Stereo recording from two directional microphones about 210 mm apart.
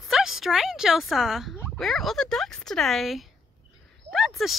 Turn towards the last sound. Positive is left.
turn(degrees=0)  # may be behind; listen again after turning